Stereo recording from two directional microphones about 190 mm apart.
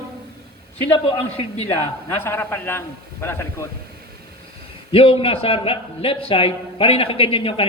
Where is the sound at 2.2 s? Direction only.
10° left (ahead or behind).